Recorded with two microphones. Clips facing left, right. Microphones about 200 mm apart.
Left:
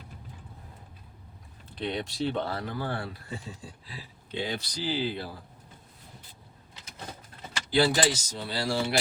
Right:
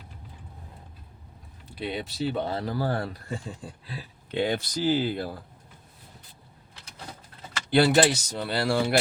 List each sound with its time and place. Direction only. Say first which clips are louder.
1.7 s speech: even; 5° right (ahead or behind)
2.4 s speech: right 3 dB; 20° right (ahead or behind)
2.6 s speech: right 5 dB; 35° right (ahead or behind)
7.7 s speech: right 4 dB; 60° right (ahead or behind)